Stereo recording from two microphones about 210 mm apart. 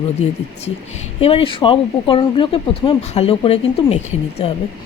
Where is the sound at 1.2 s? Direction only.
25° left (ahead or behind).